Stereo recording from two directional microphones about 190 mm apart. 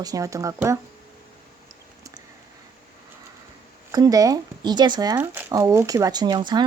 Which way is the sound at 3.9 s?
20° right (ahead or behind).